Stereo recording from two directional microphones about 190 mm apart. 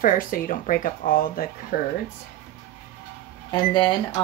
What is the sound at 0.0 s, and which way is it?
Speech, 45° left (ahead or behind).